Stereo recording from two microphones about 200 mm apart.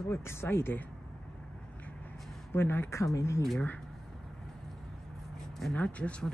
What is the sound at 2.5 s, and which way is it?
Speech, 10° left (ahead or behind).